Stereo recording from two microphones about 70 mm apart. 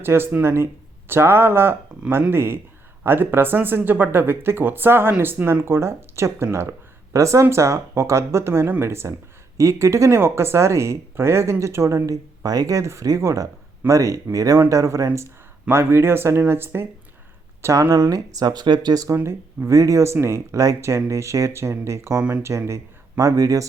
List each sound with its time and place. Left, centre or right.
0.0 s speech: right
15.7 s speech: right
17.6 s speech: right
19.0 s speech: right
22.2 s speech: centre
22.4 s speech: right